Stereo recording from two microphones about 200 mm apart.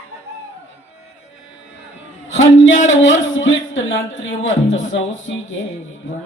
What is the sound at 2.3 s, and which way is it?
Speech, 70° left (ahead or behind).